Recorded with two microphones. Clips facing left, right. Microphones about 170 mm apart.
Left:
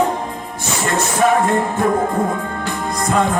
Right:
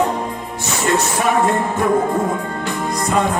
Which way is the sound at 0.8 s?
50° left (ahead or behind).